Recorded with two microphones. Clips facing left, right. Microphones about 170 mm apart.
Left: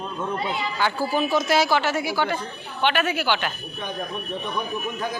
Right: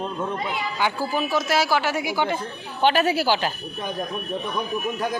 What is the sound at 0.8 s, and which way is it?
Speech, 15° right (ahead or behind).